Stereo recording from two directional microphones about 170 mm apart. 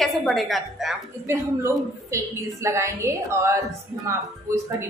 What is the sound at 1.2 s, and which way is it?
A woman's voice, 15° right (ahead or behind).